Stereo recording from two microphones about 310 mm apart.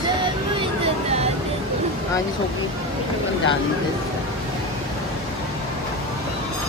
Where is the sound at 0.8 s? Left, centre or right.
Centre.